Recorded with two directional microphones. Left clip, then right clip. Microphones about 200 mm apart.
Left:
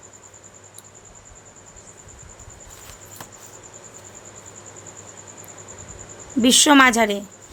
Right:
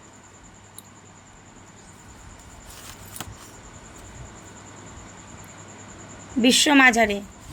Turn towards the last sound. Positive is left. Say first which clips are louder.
# left 2 dB
turn(degrees=25)  # may be behind; listen again after turning